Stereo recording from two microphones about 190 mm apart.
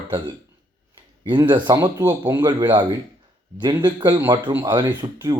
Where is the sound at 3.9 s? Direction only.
25° right (ahead or behind).